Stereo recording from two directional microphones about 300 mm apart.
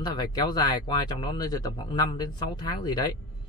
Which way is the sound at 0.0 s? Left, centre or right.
Centre.